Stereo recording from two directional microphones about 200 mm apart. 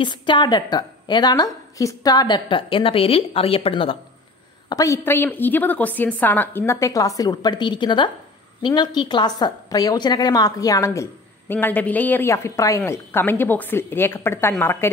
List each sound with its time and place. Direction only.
0.0 s a woman's voice: 25° left (ahead or behind)
4.6 s a woman's voice: 15° left (ahead or behind)